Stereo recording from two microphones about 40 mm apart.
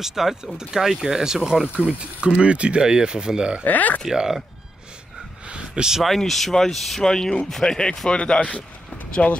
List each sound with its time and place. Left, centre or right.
0.0 s speech: centre
1.8 s speech: right
3.6 s speech: left
4.1 s speech: centre
5.5 s a sound: centre
6.0 s speech: centre
7.0 s speech: centre
8.1 s speech: left
8.4 s speech: left